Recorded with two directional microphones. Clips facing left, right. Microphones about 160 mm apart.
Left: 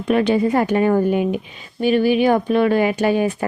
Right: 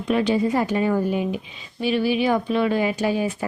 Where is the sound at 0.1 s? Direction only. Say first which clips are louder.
Left 4 dB; 60° left (ahead or behind).